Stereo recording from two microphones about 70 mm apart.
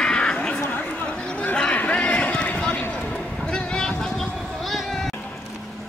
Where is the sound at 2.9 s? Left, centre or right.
Centre.